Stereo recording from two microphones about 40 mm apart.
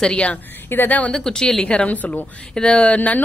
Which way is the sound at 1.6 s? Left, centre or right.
Left.